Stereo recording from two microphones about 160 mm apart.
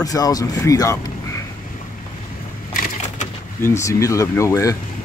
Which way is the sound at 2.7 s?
60° left (ahead or behind).